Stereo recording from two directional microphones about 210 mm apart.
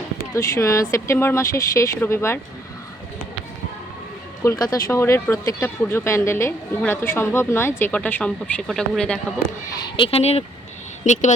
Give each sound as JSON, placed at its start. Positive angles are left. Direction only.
{"t": 0.3, "sound": "speech", "side_deg": 15}
{"t": 4.4, "sound": "speech", "side_deg": 20}
{"t": 9.8, "sound": "speech", "side_deg": 25}